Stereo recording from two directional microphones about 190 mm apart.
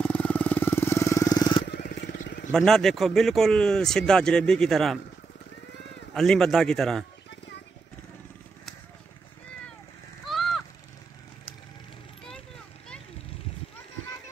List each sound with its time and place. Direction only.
0.0 s vehicle: 5° left (ahead or behind)
1.7 s vehicle: 60° left (ahead or behind)
2.5 s speech: centre (ahead or behind)
6.1 s speech: centre (ahead or behind)
10.2 s a sound: centre (ahead or behind)